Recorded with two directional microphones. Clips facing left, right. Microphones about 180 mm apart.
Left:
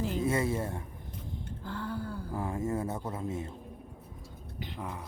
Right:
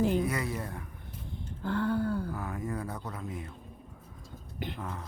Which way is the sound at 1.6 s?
65° right (ahead or behind).